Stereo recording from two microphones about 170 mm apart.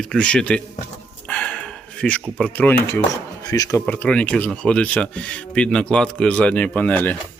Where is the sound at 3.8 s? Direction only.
10° left (ahead or behind).